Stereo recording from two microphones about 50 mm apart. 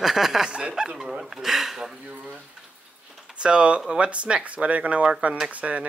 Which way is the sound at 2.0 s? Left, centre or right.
Right.